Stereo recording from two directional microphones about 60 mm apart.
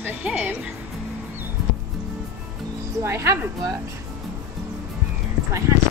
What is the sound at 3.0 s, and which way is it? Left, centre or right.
Speech, right.